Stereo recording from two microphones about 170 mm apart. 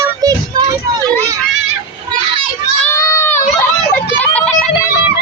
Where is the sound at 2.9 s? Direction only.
15° left (ahead or behind).